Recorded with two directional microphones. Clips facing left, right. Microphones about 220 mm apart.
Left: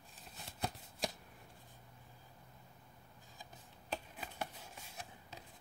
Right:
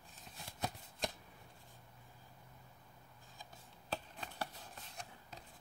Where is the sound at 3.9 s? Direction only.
10° left (ahead or behind).